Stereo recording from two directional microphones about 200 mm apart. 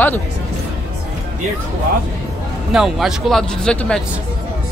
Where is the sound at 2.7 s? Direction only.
Centre (ahead or behind).